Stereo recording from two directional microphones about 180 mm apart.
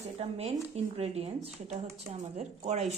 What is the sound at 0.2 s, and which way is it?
A woman's voice, 35° right (ahead or behind).